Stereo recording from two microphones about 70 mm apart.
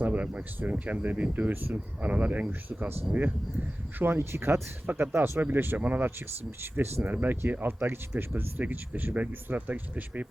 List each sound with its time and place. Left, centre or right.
0.0 s speech: right
3.9 s speech: right